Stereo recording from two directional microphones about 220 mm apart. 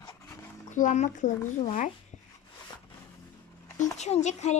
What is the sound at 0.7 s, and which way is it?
Speech, 35° left (ahead or behind).